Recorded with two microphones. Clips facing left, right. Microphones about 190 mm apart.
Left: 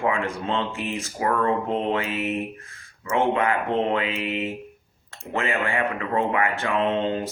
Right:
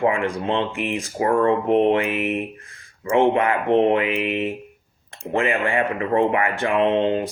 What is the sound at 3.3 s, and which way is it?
Speech, 25° right (ahead or behind).